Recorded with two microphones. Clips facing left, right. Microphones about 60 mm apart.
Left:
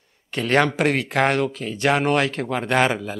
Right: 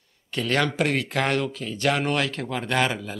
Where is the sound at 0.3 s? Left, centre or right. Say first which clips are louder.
Left 5 dB; left.